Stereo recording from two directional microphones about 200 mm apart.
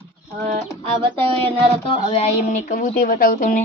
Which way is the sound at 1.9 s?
30° left (ahead or behind).